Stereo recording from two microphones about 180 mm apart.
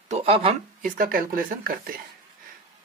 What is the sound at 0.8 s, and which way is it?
Speech, 50° right (ahead or behind).